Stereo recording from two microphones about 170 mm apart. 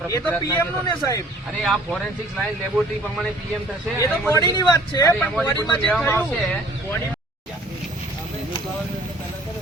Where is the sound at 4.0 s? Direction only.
20° left (ahead or behind).